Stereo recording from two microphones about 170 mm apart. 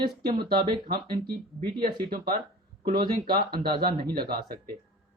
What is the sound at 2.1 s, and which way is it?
Speech, 65° right (ahead or behind).